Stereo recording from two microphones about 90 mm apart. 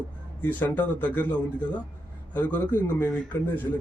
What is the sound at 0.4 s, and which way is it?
Speech, 20° left (ahead or behind).